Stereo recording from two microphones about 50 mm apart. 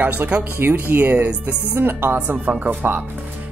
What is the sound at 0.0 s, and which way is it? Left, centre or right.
Speech, right.